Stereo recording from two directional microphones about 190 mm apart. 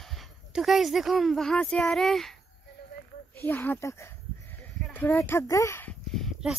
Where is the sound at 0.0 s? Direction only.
Centre (ahead or behind).